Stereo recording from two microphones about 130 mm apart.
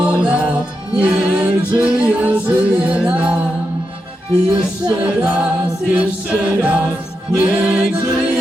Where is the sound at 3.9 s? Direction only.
45° right (ahead or behind).